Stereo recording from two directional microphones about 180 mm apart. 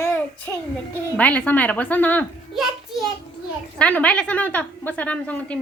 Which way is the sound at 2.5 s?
Centre (ahead or behind).